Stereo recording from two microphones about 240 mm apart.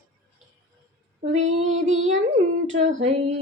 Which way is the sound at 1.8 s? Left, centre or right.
Right.